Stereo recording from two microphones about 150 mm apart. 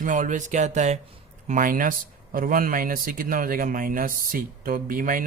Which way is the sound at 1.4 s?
65° right (ahead or behind).